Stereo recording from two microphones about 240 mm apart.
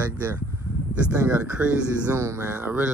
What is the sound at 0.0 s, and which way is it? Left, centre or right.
Speech, centre.